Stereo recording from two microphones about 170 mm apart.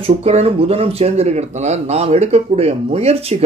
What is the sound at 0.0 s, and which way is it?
Speech, 35° right (ahead or behind).